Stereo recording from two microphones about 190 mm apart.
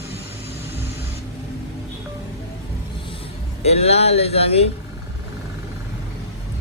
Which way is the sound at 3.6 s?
35° left (ahead or behind).